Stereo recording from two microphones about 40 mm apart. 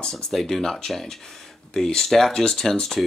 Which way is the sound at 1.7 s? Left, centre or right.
Centre.